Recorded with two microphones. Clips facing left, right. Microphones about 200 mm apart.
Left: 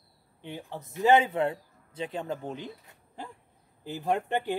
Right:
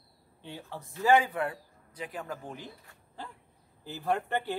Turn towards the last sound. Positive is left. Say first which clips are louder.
# left 2 dB
turn(degrees=15)  # may be behind; listen again after turning